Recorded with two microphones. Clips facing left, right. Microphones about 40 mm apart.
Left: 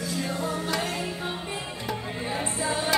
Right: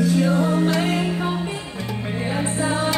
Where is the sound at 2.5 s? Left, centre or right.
Right.